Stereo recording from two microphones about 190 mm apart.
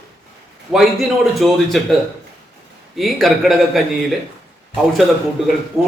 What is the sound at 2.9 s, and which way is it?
Speech, centre (ahead or behind).